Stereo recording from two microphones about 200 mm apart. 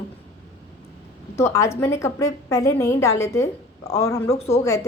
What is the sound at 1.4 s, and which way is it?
A woman's voice, 15° left (ahead or behind).